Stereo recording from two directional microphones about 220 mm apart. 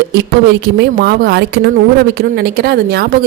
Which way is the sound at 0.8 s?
45° right (ahead or behind).